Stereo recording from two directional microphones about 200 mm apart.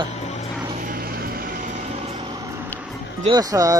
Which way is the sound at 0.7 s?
45° right (ahead or behind).